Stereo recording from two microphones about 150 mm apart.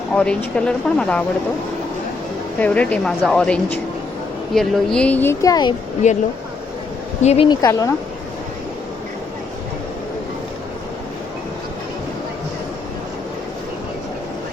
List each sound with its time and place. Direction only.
0.1 s speech: 5° left (ahead or behind)
2.6 s speech: 10° left (ahead or behind); by 5.7 s 25° left (ahead or behind)
6.0 s speech: 55° left (ahead or behind)
7.4 s speech: 25° left (ahead or behind)